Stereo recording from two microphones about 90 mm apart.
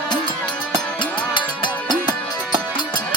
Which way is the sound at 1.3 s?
60° left (ahead or behind).